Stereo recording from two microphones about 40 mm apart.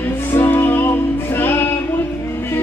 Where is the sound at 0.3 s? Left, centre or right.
Left.